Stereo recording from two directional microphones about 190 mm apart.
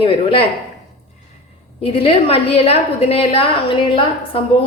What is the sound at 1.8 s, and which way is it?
A woman's voice, 30° left (ahead or behind).